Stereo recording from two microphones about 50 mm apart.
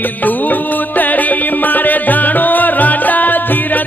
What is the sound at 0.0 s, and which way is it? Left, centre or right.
Music, left.